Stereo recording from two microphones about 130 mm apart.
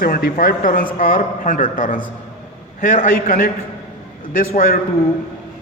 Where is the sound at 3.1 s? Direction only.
85° left.